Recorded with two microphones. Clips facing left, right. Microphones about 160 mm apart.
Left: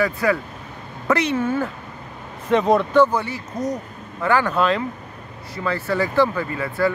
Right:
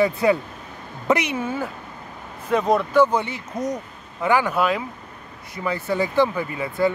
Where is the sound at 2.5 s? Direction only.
Centre (ahead or behind).